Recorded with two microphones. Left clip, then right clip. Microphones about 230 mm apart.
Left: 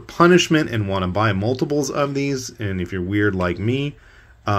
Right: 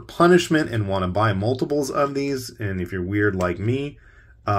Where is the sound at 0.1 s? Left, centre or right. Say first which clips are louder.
Left 2 dB; centre.